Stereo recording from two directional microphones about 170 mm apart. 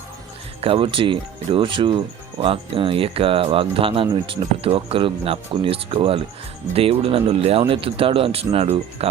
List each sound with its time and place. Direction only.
0.6 s speech: 30° right (ahead or behind)